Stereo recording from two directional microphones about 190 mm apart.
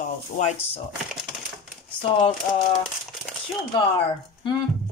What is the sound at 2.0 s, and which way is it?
Speech, 25° left (ahead or behind).